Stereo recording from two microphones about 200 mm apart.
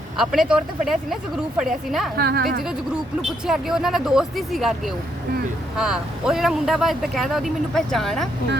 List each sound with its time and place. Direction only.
0.2 s speech: centre (ahead or behind)
2.1 s a woman's voice: 50° right (ahead or behind)
3.2 s speech: centre (ahead or behind)
5.7 s speech: 5° right (ahead or behind)